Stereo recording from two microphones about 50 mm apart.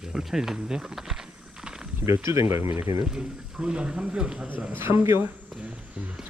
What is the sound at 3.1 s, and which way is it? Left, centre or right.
Speech, centre.